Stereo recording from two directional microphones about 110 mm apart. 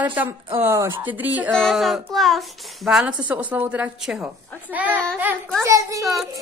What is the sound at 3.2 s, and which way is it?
Speech, 15° right (ahead or behind).